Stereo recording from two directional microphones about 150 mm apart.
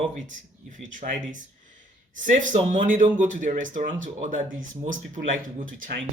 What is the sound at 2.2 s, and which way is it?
Speech, 60° right (ahead or behind).